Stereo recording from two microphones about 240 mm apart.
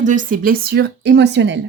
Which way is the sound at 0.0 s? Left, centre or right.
Right.